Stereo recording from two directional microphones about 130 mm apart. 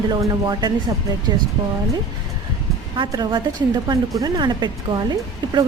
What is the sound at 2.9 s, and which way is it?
Speech, 35° right (ahead or behind).